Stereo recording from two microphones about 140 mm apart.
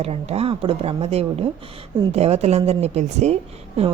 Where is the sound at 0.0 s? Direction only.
45° right (ahead or behind).